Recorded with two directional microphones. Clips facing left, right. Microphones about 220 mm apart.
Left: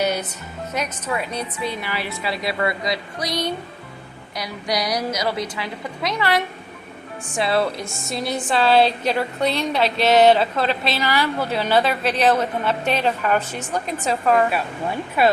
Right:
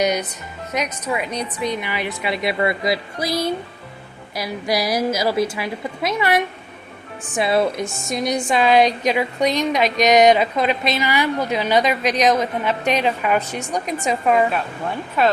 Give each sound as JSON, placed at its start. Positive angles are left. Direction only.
{"t": 0.0, "sound": "a woman's voice", "side_deg": -15}
{"t": 3.2, "sound": "speech", "side_deg": -5}
{"t": 4.4, "sound": "a woman's voice", "side_deg": -25}
{"t": 7.3, "sound": "a woman's voice", "side_deg": -20}
{"t": 7.9, "sound": "speech", "side_deg": 0}
{"t": 8.1, "sound": "a woman's voice", "side_deg": -15}
{"t": 15.2, "sound": "speech", "side_deg": 10}